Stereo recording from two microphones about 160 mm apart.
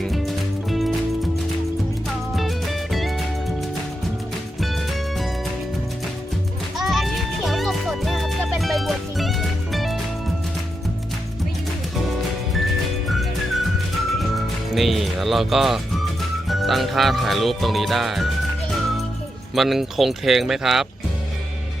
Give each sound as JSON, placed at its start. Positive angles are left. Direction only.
{"t": 0.0, "sound": "music", "side_deg": 0}
{"t": 2.3, "sound": "music", "side_deg": 0}
{"t": 4.6, "sound": "music", "side_deg": 0}
{"t": 6.7, "sound": "music", "side_deg": 0}
{"t": 13.1, "sound": "music", "side_deg": 0}
{"t": 19.5, "sound": "music", "side_deg": 0}